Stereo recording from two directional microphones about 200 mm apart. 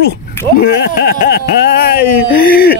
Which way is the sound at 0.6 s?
50° left (ahead or behind).